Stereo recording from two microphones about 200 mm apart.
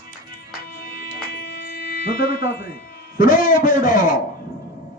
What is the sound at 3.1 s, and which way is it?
Speech, 45° left (ahead or behind).